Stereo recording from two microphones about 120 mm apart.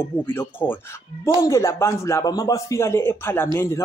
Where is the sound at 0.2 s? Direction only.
15° left (ahead or behind).